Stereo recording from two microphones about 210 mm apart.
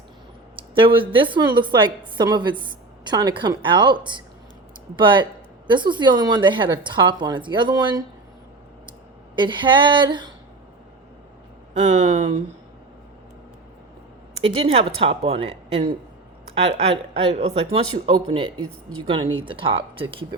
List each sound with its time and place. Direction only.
0.5 s speech: 25° right (ahead or behind)
9.3 s speech: 20° right (ahead or behind)
11.8 s speech: 35° right (ahead or behind)
14.4 s speech: 25° right (ahead or behind)